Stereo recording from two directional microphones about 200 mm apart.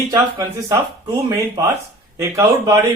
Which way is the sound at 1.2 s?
15° right (ahead or behind).